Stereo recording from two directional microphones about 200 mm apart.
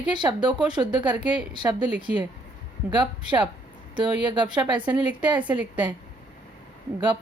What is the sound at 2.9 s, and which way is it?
Speech, 20° right (ahead or behind).